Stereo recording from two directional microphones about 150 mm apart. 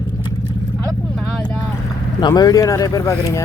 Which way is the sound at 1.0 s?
Centre (ahead or behind).